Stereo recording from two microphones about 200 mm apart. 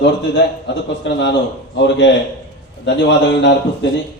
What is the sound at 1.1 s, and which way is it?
A man's voice, 60° left (ahead or behind).